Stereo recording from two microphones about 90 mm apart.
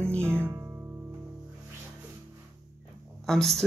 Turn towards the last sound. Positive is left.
turn(degrees=5)  # may be behind; listen again after turning